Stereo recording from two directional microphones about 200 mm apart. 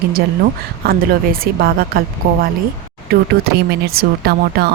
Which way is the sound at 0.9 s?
45° right (ahead or behind).